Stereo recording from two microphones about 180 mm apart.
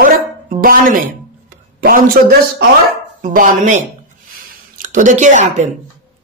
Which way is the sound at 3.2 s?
45° right (ahead or behind).